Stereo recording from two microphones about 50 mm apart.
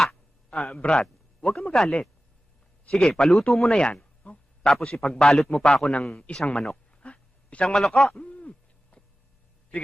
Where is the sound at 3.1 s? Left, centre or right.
Centre.